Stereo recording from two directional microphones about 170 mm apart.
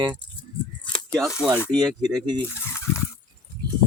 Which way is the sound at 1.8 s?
25° right (ahead or behind).